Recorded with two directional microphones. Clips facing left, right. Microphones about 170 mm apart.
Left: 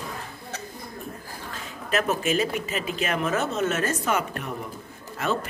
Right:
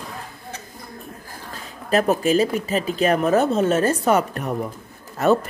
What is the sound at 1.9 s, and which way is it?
Speech, 35° right (ahead or behind).